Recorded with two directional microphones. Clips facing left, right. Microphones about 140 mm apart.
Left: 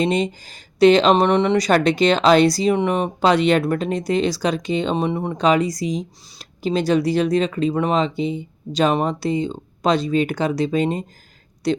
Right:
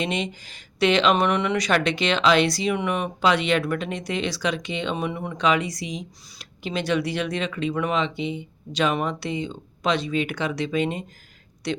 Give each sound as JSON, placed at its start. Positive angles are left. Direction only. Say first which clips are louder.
{"t": 0.0, "sound": "speech", "louder": "left 7 dB", "side_deg": 35}